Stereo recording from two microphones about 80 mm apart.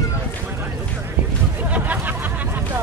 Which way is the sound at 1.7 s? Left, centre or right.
Right.